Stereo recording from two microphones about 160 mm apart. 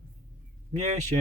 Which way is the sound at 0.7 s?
45° right (ahead or behind).